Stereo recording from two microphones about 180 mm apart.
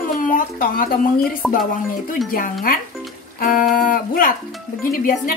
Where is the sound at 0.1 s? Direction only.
50° left (ahead or behind).